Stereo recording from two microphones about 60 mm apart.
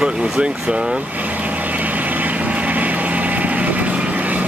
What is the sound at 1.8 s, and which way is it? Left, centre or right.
Vehicle, right.